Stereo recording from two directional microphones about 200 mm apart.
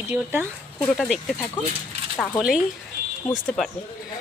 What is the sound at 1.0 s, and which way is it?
Speech, centre (ahead or behind).